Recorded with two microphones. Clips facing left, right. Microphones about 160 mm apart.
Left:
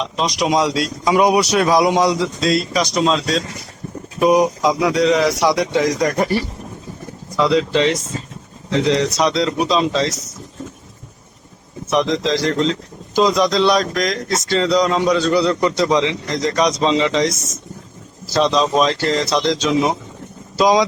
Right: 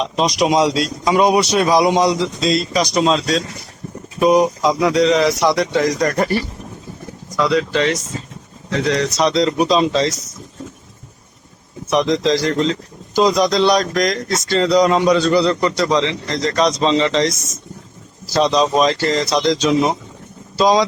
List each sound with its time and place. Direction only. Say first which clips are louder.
0.0 s a man's voice: right 3 dB; 10° right (ahead or behind)
1.0 s speech: even; 10° left (ahead or behind)
4.2 s speech: right 1 dB; 10° left (ahead or behind)
7.3 s speech: left 1 dB; 20° left (ahead or behind)
9.1 s speech: right 2 dB; centre (ahead or behind)
11.9 s speech: right 2 dB; centre (ahead or behind)
15.7 s speech: left 1 dB; 20° left (ahead or behind)
18.3 s speech: right 1 dB; centre (ahead or behind)
20.6 s speech: even; 15° left (ahead or behind)